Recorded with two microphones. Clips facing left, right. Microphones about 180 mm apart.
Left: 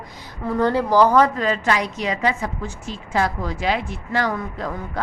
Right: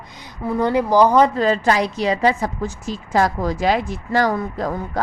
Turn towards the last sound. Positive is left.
turn(degrees=-40)  # may be behind; listen again after turning